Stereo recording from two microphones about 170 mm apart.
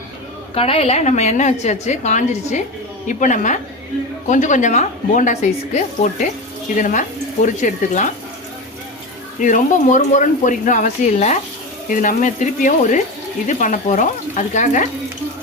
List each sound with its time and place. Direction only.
0.5 s a woman's voice: 35° left (ahead or behind)
9.4 s a woman's voice: 50° left (ahead or behind)